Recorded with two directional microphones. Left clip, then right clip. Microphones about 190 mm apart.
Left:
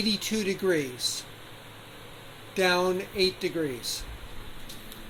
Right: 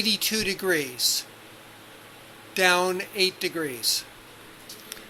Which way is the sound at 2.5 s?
Centre (ahead or behind).